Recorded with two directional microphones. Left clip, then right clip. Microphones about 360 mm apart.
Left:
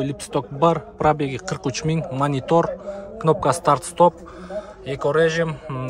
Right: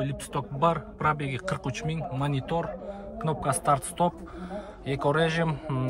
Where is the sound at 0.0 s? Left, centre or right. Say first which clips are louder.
Left 7 dB; centre.